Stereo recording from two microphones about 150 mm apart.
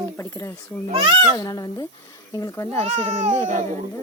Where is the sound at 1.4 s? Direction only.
25° left (ahead or behind).